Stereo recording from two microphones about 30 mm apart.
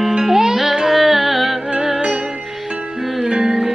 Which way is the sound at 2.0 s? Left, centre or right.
Right.